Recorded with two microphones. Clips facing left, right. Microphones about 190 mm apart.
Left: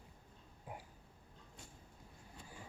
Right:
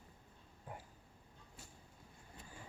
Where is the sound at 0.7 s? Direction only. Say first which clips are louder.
Left 1 dB; 10° left (ahead or behind).